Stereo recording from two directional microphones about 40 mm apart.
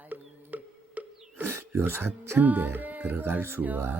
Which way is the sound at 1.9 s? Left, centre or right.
Right.